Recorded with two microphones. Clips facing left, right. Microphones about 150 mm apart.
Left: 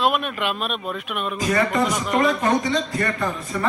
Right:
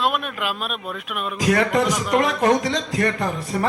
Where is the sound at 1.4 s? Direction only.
75° right (ahead or behind).